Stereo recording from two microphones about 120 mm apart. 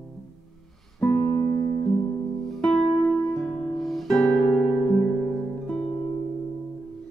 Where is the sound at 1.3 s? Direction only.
25° left (ahead or behind).